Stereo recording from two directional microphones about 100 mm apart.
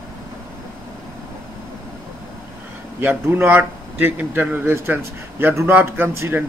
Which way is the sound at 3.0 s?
20° right (ahead or behind).